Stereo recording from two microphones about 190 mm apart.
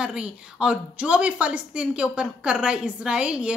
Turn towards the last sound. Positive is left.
turn(degrees=-5)  # may be behind; listen again after turning